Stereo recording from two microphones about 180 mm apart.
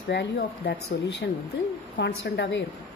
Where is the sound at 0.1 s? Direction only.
70° left (ahead or behind).